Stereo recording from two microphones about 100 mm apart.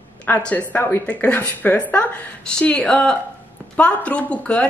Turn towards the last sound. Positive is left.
turn(degrees=10)  # may be behind; listen again after turning